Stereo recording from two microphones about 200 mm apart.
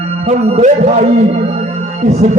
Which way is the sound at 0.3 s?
30° right (ahead or behind).